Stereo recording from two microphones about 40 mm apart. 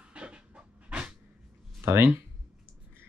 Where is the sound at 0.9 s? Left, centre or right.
Right.